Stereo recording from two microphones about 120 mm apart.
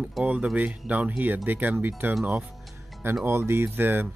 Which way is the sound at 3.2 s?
20° right (ahead or behind).